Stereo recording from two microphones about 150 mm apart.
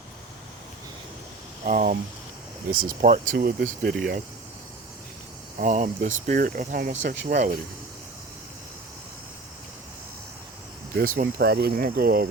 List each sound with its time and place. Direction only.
1.6 s speech: 60° right (ahead or behind)
2.6 s speech: 70° right (ahead or behind)
5.5 s speech: 55° right (ahead or behind)
10.9 s speech: 70° right (ahead or behind)